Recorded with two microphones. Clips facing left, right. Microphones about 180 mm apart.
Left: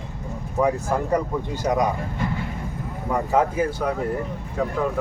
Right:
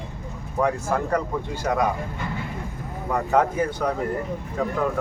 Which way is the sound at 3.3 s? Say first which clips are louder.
Even; 5° left (ahead or behind).